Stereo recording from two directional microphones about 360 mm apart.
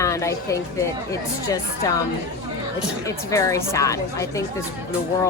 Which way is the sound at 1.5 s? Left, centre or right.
Centre.